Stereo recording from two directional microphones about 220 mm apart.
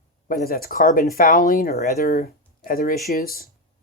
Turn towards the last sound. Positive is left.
turn(degrees=45)  # may be behind; listen again after turning